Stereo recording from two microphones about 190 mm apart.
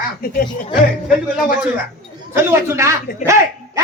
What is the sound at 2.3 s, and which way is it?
A man's voice, 10° right (ahead or behind).